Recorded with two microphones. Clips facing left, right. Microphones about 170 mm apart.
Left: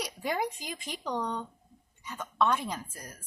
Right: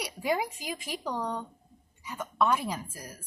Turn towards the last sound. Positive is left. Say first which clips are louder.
# right 2 dB
turn(degrees=-10)  # may be behind; listen again after turning